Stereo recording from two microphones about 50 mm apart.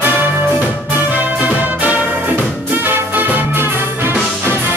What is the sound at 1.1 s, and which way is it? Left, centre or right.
Music, right.